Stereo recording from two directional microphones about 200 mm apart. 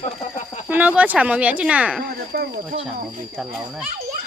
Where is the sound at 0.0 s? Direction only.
35° left (ahead or behind).